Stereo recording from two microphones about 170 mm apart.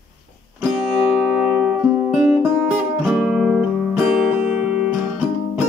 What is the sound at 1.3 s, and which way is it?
Music, 5° right (ahead or behind).